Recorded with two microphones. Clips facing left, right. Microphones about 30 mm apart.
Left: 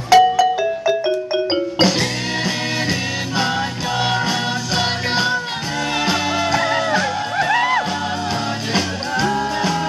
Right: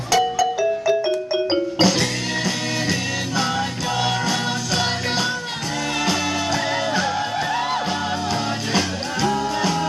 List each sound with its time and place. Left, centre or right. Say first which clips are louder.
0.1 s music: left 7 dB; left; by 7.2 s centre
8.7 s music: left 3 dB; centre